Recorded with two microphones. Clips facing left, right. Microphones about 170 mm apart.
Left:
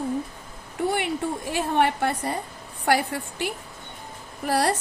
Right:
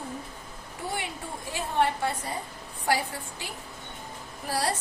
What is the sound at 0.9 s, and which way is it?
A woman's voice, 70° left (ahead or behind).